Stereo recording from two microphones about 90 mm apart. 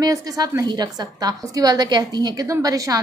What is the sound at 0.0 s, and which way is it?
A woman's voice, 45° right (ahead or behind).